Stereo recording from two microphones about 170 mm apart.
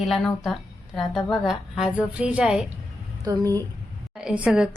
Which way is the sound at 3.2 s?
20° right (ahead or behind).